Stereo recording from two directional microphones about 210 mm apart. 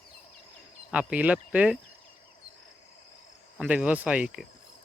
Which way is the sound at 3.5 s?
5° right (ahead or behind).